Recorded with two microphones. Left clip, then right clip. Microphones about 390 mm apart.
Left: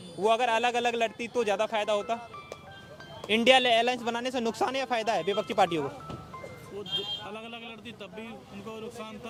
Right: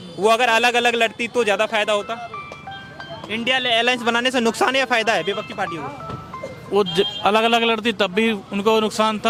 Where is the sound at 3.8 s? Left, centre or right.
Centre.